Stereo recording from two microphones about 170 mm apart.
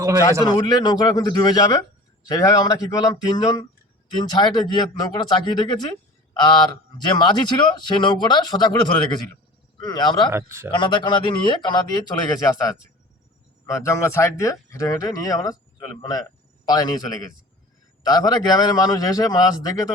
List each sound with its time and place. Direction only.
0.4 s speech: 25° left (ahead or behind)
10.3 s a man's voice: 15° right (ahead or behind)
10.7 s speech: 30° left (ahead or behind)